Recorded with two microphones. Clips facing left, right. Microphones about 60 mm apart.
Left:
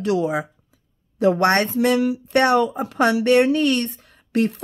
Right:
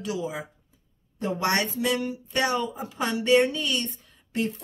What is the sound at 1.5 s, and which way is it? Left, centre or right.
Speech, left.